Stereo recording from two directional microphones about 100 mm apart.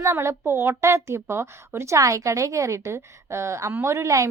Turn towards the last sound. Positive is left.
turn(degrees=-30)  # may be behind; listen again after turning